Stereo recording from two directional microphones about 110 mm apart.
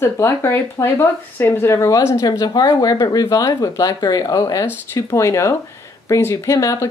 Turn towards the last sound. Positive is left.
turn(degrees=30)  # may be behind; listen again after turning